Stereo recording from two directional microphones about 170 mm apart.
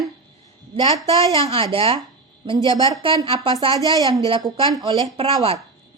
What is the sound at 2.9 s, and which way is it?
Speech, 30° right (ahead or behind).